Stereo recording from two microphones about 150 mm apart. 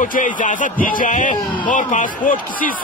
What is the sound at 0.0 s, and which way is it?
A man's voice, 60° left (ahead or behind).